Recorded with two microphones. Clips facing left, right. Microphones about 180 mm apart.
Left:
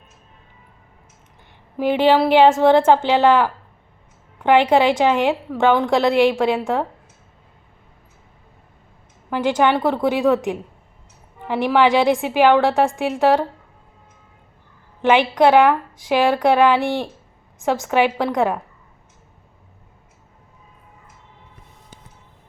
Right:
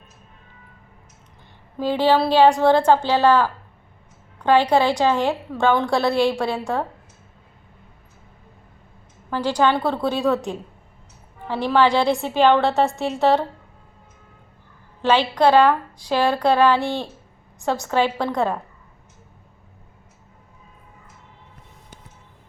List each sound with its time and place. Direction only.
1.8 s a woman's voice: 15° left (ahead or behind)
9.3 s a woman's voice: 20° left (ahead or behind)
15.0 s a woman's voice: 15° left (ahead or behind)